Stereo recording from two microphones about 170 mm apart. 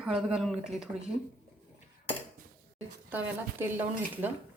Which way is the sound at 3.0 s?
10° right (ahead or behind).